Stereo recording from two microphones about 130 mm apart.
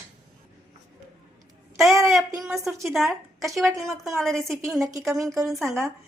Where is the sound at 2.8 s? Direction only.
Centre (ahead or behind).